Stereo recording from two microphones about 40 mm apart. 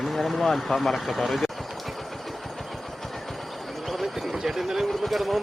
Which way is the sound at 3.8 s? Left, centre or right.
Centre.